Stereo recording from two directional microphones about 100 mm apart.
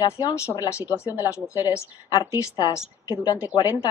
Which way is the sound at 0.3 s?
30° left (ahead or behind).